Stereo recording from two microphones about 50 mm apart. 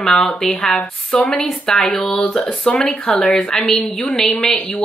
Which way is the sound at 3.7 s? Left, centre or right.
Centre.